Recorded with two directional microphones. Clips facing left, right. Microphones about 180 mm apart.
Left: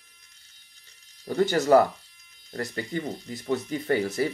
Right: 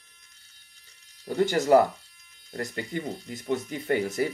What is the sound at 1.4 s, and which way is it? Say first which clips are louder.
Speech: left 1 dB; 20° right (ahead or behind).